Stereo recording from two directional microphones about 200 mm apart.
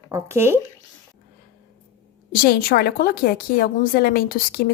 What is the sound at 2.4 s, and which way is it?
A woman's voice, 50° left (ahead or behind).